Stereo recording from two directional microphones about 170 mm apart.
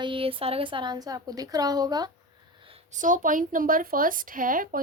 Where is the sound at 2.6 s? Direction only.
35° right (ahead or behind); by 4.8 s 55° right (ahead or behind).